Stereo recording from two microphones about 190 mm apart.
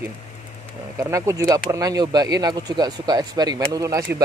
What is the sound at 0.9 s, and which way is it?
Speech, 15° right (ahead or behind).